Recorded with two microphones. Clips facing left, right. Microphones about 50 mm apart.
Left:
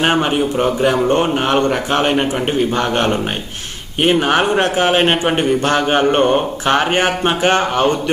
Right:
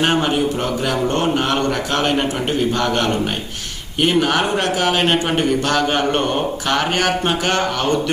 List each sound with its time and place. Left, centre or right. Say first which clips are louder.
0.0 s speech: left 2 dB; centre